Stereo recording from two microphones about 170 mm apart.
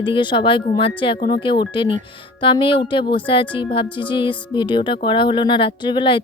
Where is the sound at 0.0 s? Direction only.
30° left (ahead or behind).